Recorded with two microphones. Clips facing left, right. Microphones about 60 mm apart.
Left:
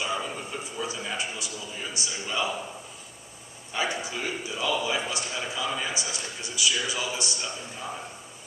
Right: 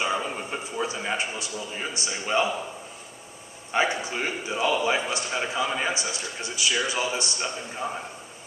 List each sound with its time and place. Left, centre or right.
0.0 s a sound: right
0.8 s a man's voice: right
3.7 s a man's voice: right